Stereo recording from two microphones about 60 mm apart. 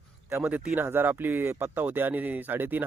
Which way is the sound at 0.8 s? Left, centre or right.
Right.